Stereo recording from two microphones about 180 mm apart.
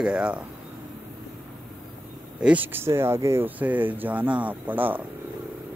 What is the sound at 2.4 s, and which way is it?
Speech, 10° right (ahead or behind).